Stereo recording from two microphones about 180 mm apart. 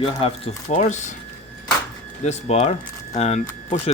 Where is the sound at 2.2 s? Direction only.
40° left (ahead or behind).